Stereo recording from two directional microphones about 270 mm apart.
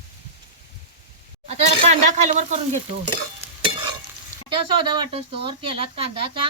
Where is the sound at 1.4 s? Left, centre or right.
Right.